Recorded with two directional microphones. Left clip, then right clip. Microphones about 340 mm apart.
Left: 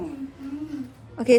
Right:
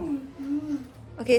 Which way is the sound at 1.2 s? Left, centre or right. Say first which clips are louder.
Left 4 dB; centre.